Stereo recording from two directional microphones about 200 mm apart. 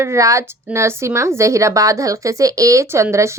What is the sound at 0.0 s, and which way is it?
A woman's voice, 15° right (ahead or behind).